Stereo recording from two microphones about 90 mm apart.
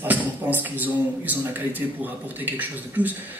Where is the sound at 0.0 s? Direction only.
20° right (ahead or behind).